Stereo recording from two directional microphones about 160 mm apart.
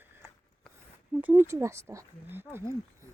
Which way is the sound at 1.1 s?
10° right (ahead or behind).